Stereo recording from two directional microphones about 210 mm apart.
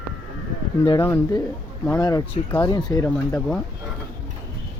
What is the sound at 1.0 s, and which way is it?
Speech, 15° left (ahead or behind).